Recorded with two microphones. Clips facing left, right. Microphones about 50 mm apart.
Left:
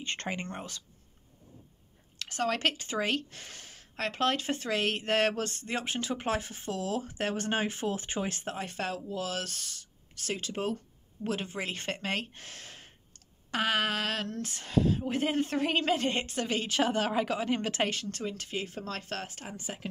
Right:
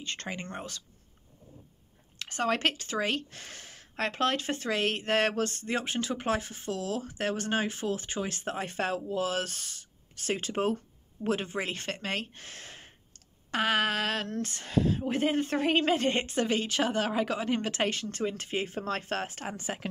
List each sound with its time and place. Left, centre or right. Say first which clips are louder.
0.0 s speech: left 2 dB; left
0.3 s speech: left 2 dB; centre
2.1 s speech: right 2 dB; centre
8.5 s speech: right 3 dB; centre
10.3 s speech: right 4 dB; right
11.2 s speech: right 3 dB; centre
11.7 s speech: even; centre
18.2 s speech: right 6 dB; right
19.4 s speech: right 4 dB; right